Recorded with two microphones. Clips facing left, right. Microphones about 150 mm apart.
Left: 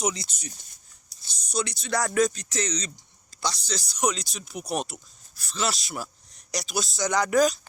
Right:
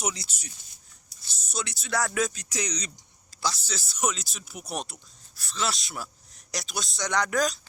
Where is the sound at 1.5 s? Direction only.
5° right (ahead or behind).